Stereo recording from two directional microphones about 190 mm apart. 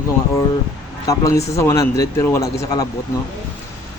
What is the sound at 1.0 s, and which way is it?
Speech, 15° left (ahead or behind).